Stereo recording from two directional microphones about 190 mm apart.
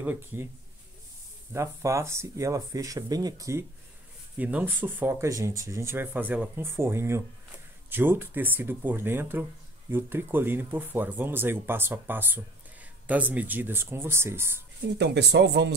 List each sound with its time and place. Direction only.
0.0 s speech: 10° right (ahead or behind)
1.5 s speech: 15° right (ahead or behind)
15.0 s speech: 60° right (ahead or behind)